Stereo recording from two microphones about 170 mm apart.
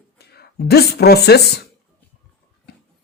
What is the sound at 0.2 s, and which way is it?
A woman's voice, 70° left (ahead or behind).